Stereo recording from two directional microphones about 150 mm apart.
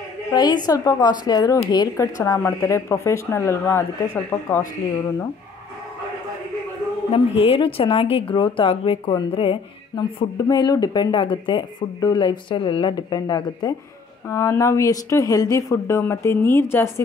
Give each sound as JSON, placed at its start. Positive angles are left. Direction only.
{"t": 0.3, "sound": "a woman's voice", "side_deg": 25}
{"t": 7.1, "sound": "speech", "side_deg": 40}